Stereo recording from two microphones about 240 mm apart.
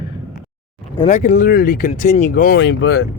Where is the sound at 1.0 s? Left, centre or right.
Left.